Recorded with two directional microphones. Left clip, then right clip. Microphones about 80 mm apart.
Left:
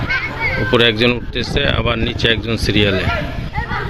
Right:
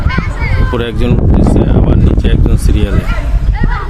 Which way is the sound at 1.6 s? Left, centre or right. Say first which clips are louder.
Right 2 dB; right.